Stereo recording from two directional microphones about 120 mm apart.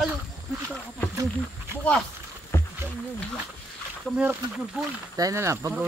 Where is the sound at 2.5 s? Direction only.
20° left (ahead or behind).